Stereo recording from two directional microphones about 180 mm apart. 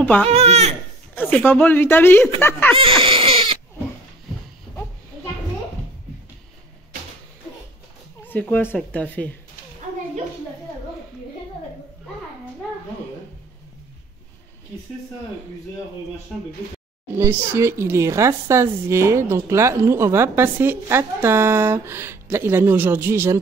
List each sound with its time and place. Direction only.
0.0 s speech: 10° left (ahead or behind)
0.3 s speech: 35° right (ahead or behind)
1.1 s a woman's voice: 10° left (ahead or behind)
2.8 s baby cry: 30° right (ahead or behind)
8.3 s a woman's voice: 10° left (ahead or behind)
17.2 s speech: 15° right (ahead or behind)